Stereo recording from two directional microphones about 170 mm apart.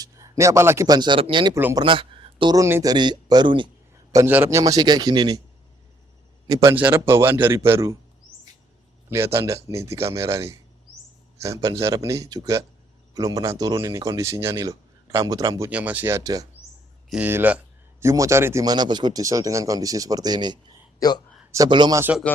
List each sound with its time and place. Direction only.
0.0 s a man's voice: 20° right (ahead or behind)
1.5 s a man's voice: 15° right (ahead or behind)
1.8 s speech: 30° right (ahead or behind)
4.1 s speech: 15° right (ahead or behind)
6.5 s a man's voice: 15° right (ahead or behind)
9.0 s a man's voice: 15° right (ahead or behind)
17.1 s a man's voice: 10° right (ahead or behind)